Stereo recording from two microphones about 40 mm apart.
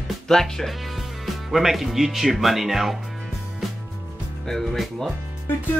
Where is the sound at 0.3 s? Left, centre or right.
Centre.